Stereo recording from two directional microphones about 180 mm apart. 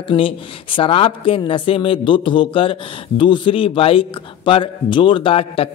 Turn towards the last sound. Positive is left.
turn(degrees=30)  # may be behind; listen again after turning